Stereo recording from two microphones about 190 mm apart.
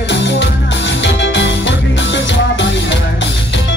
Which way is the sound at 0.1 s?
70° left (ahead or behind).